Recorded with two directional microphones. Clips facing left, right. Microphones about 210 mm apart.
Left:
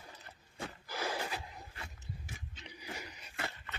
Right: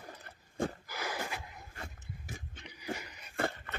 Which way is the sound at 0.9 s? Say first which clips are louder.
Left 1 dB; 30° left (ahead or behind).